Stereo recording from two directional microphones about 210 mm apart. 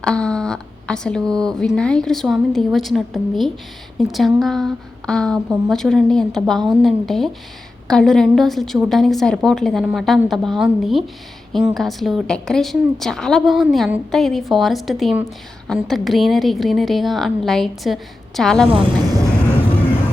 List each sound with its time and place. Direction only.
0.0 s speech: 5° left (ahead or behind)